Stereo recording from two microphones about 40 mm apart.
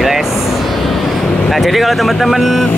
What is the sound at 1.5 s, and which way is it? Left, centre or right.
Speech, centre.